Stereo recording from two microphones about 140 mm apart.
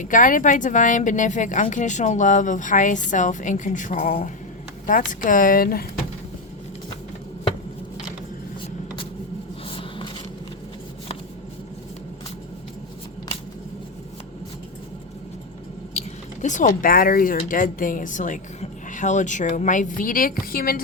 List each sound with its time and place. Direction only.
0.0 s a woman's voice: 70° left (ahead or behind); by 5.8 s 90° left
9.6 s a sound: 40° left (ahead or behind)
16.0 s speech: 60° left (ahead or behind); by 20.8 s 90° left